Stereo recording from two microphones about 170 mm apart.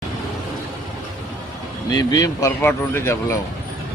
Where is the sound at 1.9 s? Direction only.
25° left (ahead or behind).